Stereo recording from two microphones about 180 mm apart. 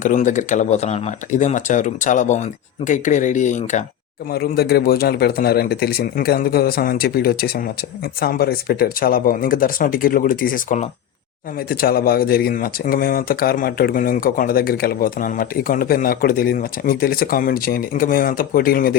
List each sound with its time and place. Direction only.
0.0 s speech: 45° left (ahead or behind)
4.3 s a man's voice: 60° left (ahead or behind)